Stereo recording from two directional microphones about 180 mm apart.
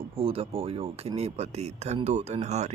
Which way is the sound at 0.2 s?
30° right (ahead or behind).